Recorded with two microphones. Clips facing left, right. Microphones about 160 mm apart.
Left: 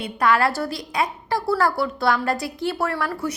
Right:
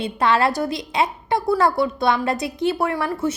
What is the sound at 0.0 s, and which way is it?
A woman's voice, 25° right (ahead or behind).